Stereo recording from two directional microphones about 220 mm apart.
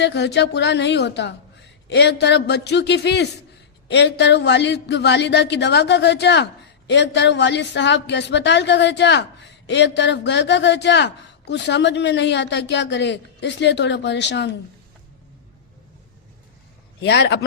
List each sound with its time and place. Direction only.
0.0 s speech: 50° left (ahead or behind)
17.0 s speech: 50° left (ahead or behind)